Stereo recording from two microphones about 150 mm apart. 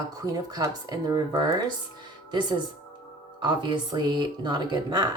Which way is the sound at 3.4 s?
30° right (ahead or behind).